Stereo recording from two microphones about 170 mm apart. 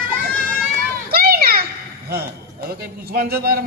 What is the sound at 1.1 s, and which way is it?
Children playing, 65° right (ahead or behind).